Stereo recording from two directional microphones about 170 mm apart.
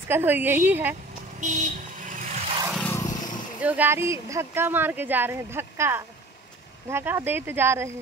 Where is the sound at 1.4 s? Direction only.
45° right (ahead or behind).